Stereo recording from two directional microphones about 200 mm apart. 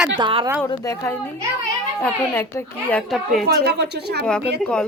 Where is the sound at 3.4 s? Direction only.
50° right (ahead or behind).